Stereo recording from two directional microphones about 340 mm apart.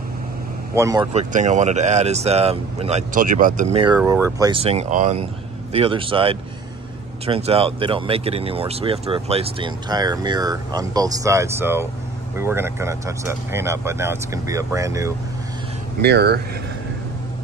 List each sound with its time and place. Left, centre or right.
0.7 s speech: centre
16.0 s speech: right